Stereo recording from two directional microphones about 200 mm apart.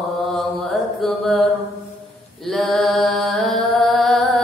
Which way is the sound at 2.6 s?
Centre (ahead or behind).